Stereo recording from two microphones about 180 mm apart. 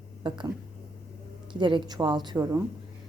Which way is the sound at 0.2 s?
25° right (ahead or behind).